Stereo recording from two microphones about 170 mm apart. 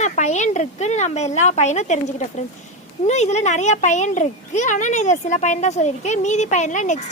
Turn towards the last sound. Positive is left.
turn(degrees=45)  # may be behind; listen again after turning